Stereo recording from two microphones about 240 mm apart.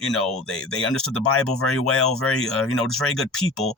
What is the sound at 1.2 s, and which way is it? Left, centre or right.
Speech, left.